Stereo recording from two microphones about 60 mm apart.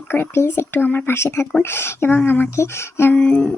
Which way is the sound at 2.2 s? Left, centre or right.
Left.